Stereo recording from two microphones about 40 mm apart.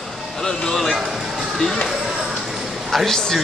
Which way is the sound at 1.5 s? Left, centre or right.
Centre.